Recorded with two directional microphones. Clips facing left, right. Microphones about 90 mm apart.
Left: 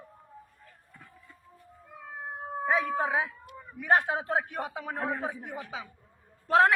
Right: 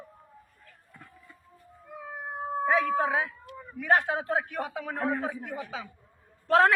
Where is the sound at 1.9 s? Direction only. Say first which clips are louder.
Right 2 dB; 5° right (ahead or behind).